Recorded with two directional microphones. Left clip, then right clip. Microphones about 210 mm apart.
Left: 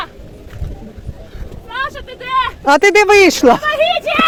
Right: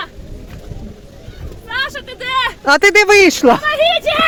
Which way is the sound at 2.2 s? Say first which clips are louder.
Left 1 dB; 20° right (ahead or behind).